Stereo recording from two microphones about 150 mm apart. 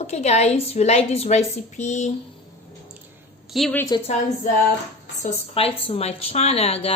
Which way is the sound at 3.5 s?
Centre (ahead or behind).